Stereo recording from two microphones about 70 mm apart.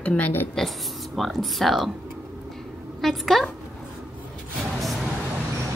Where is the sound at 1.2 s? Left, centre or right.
Centre.